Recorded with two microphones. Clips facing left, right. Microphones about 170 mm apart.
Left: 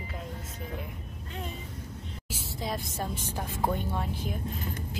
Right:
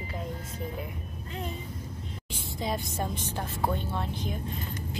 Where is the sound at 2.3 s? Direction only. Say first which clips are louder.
Right 2 dB; centre (ahead or behind).